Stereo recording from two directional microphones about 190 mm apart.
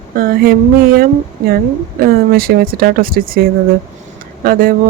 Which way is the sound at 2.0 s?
50° right (ahead or behind).